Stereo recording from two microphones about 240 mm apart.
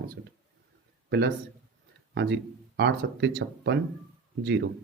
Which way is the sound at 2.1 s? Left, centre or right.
Right.